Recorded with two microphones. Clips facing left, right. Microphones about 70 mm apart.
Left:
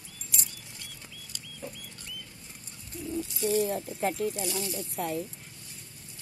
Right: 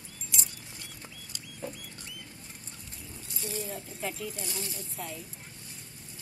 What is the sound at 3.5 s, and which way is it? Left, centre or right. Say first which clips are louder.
Speech: left 10 dB; left.